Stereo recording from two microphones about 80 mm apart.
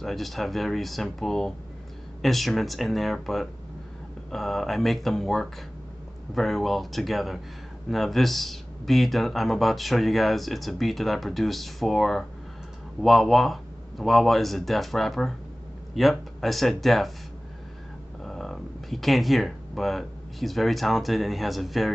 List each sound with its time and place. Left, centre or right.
0.0 s speech: centre
18.2 s speech: centre